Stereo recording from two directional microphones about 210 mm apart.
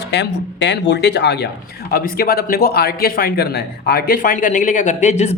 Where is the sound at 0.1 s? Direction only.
55° left (ahead or behind).